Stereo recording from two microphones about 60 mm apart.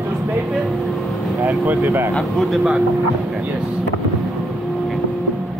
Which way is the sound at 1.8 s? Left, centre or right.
Right.